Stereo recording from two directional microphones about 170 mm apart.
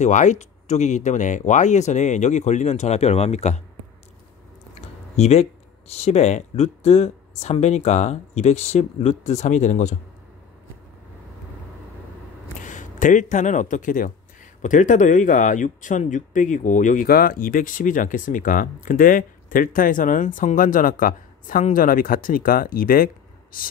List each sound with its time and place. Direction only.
0.0 s speech: 45° left (ahead or behind)
5.1 s speech: 40° left (ahead or behind)
12.6 s speech: 50° left (ahead or behind)